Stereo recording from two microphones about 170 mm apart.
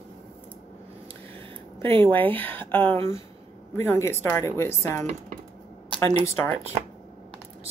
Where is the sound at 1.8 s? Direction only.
15° left (ahead or behind).